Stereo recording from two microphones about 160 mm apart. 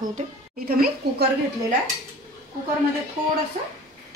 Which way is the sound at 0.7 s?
70° right (ahead or behind).